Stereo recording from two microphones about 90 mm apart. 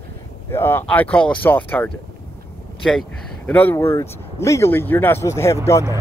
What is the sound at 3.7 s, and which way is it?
Speech, 30° left (ahead or behind).